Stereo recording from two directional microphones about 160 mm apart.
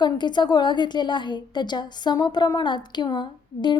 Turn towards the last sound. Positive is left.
turn(degrees=30)  # may be behind; listen again after turning